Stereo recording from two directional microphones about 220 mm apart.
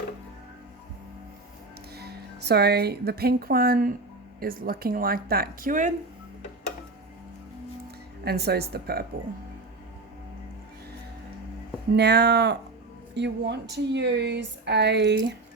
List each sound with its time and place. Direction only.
2.0 s speech: 45° right (ahead or behind)
8.2 s speech: 45° right (ahead or behind)
11.9 s speech: 50° right (ahead or behind)